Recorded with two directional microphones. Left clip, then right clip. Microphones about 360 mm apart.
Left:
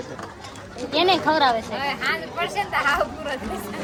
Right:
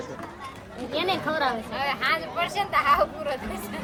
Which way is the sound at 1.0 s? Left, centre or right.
Centre.